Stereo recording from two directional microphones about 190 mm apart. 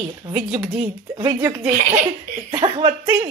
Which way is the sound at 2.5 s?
25° right (ahead or behind).